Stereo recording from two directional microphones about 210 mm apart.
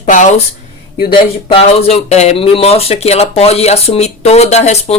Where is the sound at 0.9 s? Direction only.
25° left (ahead or behind).